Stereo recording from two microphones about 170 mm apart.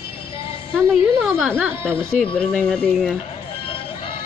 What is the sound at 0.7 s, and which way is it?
Speech, centre (ahead or behind).